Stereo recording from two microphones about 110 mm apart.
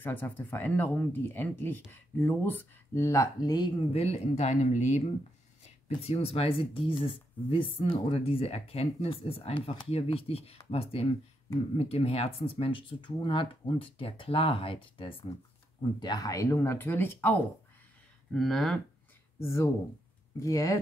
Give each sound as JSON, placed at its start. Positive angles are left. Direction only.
{"t": 0.0, "sound": "speech", "side_deg": 20}
{"t": 3.9, "sound": "speech", "side_deg": 75}
{"t": 6.0, "sound": "speech", "side_deg": 65}
{"t": 16.0, "sound": "speech", "side_deg": 40}
{"t": 18.3, "sound": "speech", "side_deg": 0}
{"t": 19.4, "sound": "speech", "side_deg": 25}